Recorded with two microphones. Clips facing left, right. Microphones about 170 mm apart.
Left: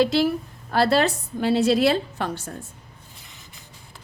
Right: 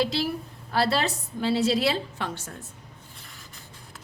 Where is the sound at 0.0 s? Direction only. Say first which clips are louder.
Left 6 dB; 55° left (ahead or behind); by 2.6 s 35° left (ahead or behind).